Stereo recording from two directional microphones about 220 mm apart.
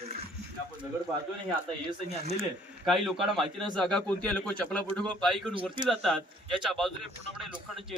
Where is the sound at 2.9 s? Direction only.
Centre (ahead or behind).